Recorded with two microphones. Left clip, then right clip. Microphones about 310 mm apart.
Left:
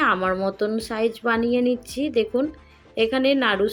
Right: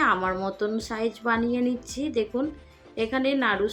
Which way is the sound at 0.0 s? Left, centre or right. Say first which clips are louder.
Left 3 dB; centre.